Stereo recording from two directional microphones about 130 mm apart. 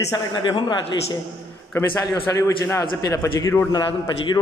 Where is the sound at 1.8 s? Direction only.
20° left (ahead or behind).